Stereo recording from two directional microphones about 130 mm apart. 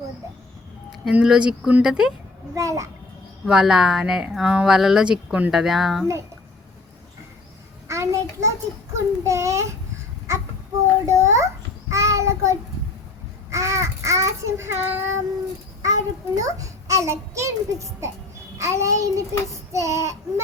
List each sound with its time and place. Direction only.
1.1 s speech: 5° right (ahead or behind)
2.6 s a child's voice: 25° right (ahead or behind)
3.4 s speech: 5° right (ahead or behind)
7.9 s a child's voice: 20° right (ahead or behind)
11.0 s a child's voice: 25° right (ahead or behind)
11.9 s child singing: 25° right (ahead or behind)
15.8 s a child's voice: 25° right (ahead or behind)